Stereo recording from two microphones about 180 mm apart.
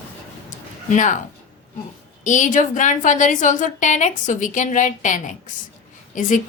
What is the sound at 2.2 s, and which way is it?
A woman's voice, 45° left (ahead or behind).